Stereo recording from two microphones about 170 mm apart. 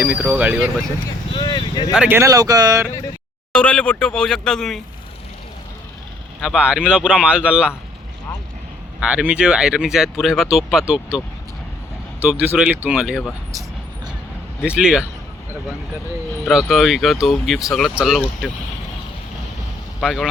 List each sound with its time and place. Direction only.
0.2 s speech: 10° right (ahead or behind)
1.4 s speech: 25° left (ahead or behind)
1.9 s speech: 10° right (ahead or behind)
3.5 s speech: 5° left (ahead or behind)
6.4 s speech: 5° right (ahead or behind)
9.0 s speech: 5° right (ahead or behind)
12.2 s speech: 10° right (ahead or behind)
14.6 s speech: 5° right (ahead or behind)
16.5 s speech: centre (ahead or behind)
20.0 s speech: centre (ahead or behind)